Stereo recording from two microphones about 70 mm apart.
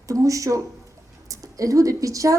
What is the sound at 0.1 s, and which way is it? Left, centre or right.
A woman's voice, right.